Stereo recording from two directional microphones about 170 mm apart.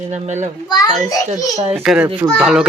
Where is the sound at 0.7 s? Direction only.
20° left (ahead or behind).